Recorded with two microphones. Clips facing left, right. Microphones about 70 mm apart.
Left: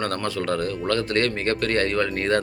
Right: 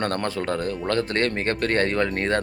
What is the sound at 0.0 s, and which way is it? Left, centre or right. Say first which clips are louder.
Speech: even; right.